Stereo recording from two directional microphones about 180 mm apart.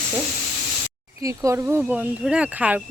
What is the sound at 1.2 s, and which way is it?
Speech, 15° right (ahead or behind).